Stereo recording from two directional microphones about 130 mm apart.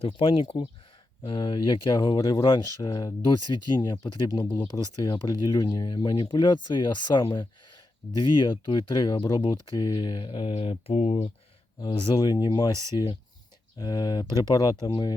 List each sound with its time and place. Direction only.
0.0 s speech: 40° left (ahead or behind); by 11.3 s 55° left (ahead or behind)
11.8 s speech: 40° left (ahead or behind)